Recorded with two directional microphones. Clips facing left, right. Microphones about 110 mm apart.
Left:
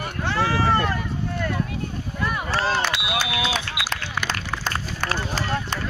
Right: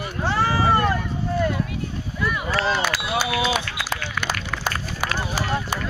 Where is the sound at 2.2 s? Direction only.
40° left (ahead or behind).